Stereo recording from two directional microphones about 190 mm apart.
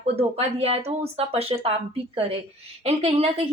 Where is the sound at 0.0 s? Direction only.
30° right (ahead or behind).